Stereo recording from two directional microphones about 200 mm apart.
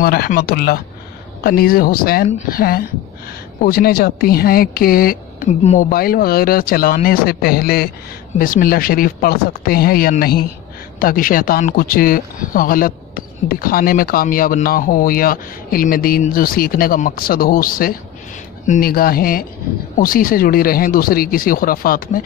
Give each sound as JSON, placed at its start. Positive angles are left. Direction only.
{"t": 0.0, "sound": "speech", "side_deg": 50}